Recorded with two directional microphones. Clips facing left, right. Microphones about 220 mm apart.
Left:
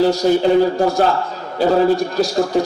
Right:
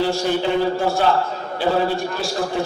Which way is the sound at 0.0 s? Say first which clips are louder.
Left 6 dB; 40° left (ahead or behind).